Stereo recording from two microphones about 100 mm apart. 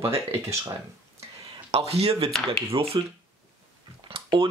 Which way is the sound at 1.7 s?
90° right.